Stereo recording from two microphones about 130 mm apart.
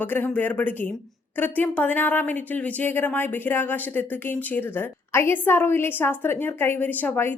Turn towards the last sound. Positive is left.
turn(degrees=15)  # may be behind; listen again after turning